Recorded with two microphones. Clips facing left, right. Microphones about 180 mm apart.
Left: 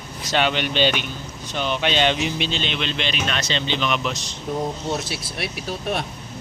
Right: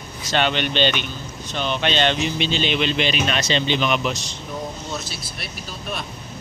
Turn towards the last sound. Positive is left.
turn(degrees=70)  # may be behind; listen again after turning